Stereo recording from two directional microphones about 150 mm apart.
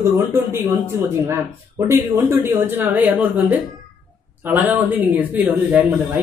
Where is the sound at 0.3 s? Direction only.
15° right (ahead or behind).